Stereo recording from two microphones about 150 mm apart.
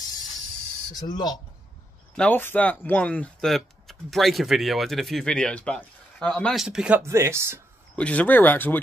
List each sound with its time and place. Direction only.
0.9 s speech: 25° left (ahead or behind)
2.1 s speech: 10° left (ahead or behind); by 7.0 s 5° right (ahead or behind)
7.0 s speech: 15° right (ahead or behind)
7.9 s speech: 10° left (ahead or behind)